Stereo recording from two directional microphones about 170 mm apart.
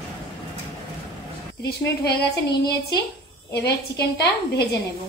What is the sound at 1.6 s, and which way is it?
Speech, 75° left (ahead or behind).